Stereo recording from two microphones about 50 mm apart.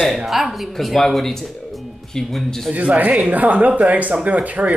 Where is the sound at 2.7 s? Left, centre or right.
Right.